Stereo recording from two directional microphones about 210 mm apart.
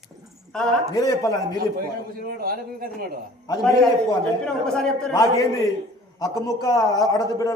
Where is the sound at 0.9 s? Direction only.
15° left (ahead or behind).